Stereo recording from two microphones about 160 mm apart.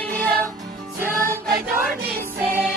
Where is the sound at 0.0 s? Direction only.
10° left (ahead or behind).